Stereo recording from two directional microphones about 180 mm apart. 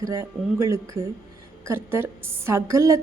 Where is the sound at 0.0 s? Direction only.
15° right (ahead or behind).